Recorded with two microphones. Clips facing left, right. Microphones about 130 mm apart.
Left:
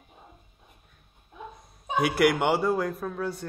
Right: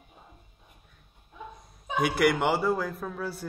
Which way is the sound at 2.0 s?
Centre (ahead or behind).